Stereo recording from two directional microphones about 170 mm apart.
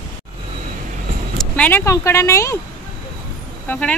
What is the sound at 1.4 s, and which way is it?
Speech, 10° left (ahead or behind).